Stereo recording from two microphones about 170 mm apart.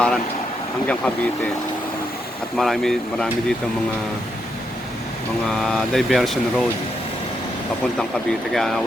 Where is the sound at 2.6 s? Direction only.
Centre (ahead or behind).